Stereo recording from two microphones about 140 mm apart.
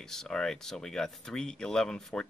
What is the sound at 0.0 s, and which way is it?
Speech, 5° left (ahead or behind).